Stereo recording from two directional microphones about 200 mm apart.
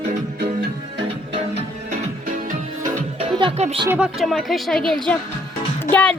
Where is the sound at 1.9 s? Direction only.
40° right (ahead or behind).